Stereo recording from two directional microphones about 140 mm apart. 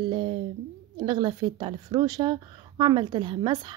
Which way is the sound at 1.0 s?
35° right (ahead or behind).